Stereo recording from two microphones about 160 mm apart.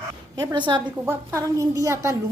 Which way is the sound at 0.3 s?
25° right (ahead or behind).